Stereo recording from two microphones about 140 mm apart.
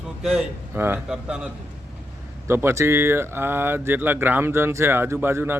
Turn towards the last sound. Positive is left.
turn(degrees=-15)  # may be behind; listen again after turning